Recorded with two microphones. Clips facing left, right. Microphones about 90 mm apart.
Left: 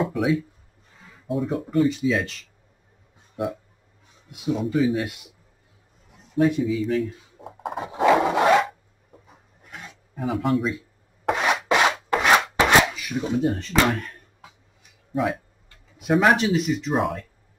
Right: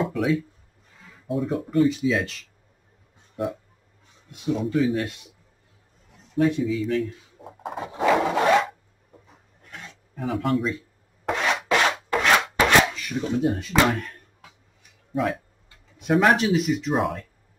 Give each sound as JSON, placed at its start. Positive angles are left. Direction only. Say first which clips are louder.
{"t": 0.0, "sound": "a sound", "louder": "left 1 dB", "side_deg": 5}
{"t": 1.2, "sound": "speech", "louder": "even", "side_deg": 0}
{"t": 6.3, "sound": "speech", "louder": "left 1 dB", "side_deg": 5}
{"t": 9.6, "sound": "filing", "louder": "left 1 dB", "side_deg": 15}
{"t": 11.3, "sound": "rub", "louder": "left 1 dB", "side_deg": 15}
{"t": 12.6, "sound": "chopping", "louder": "left 1 dB", "side_deg": 10}
{"t": 13.4, "sound": "speech", "louder": "right 1 dB", "side_deg": -5}
{"t": 15.1, "sound": "speech", "louder": "left 1 dB", "side_deg": 0}